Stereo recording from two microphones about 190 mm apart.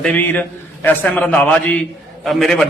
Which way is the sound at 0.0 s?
10° left (ahead or behind).